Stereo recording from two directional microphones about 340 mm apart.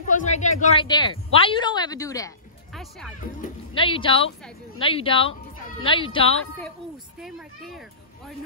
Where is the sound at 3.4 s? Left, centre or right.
Centre.